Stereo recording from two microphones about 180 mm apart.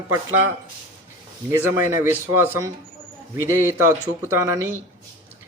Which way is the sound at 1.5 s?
15° right (ahead or behind).